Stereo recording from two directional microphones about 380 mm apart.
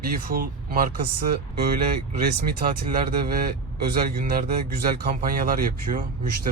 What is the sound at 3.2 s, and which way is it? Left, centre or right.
Speech, right.